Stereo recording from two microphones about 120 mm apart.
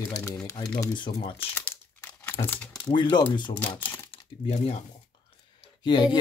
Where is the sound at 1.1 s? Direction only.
50° left (ahead or behind).